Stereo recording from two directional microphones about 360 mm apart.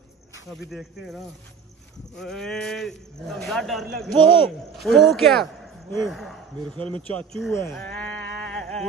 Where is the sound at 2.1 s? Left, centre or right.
Centre.